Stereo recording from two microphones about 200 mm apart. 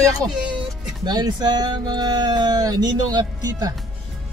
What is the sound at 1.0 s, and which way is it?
Speech, 20° right (ahead or behind).